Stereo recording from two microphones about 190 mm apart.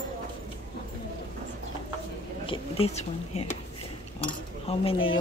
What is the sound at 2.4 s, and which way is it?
Speech, 30° left (ahead or behind).